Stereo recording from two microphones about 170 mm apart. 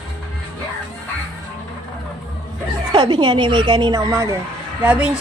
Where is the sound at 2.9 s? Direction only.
25° right (ahead or behind).